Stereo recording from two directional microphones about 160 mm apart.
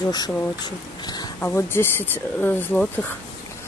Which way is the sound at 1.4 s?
15° left (ahead or behind).